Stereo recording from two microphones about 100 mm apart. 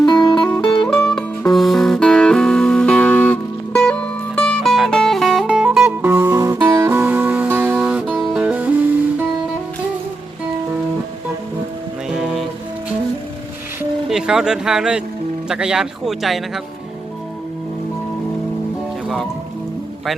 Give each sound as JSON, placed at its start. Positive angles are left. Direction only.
{"t": 0.0, "sound": "music", "side_deg": 45}
{"t": 0.9, "sound": "music", "side_deg": 5}
{"t": 6.0, "sound": "music", "side_deg": -20}
{"t": 12.1, "sound": "music", "side_deg": -5}
{"t": 14.1, "sound": "speech", "side_deg": -5}
{"t": 19.0, "sound": "music", "side_deg": 0}